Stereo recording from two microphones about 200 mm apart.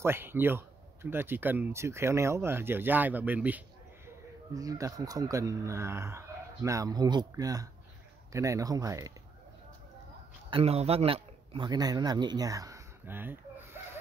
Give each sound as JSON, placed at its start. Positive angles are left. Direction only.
{"t": 0.0, "sound": "speech", "side_deg": -10}
{"t": 10.5, "sound": "a man's voice", "side_deg": -30}